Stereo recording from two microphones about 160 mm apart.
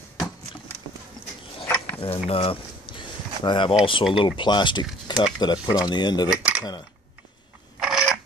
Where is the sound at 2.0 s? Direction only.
35° left (ahead or behind).